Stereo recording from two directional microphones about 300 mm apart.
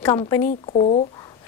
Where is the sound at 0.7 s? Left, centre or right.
Left.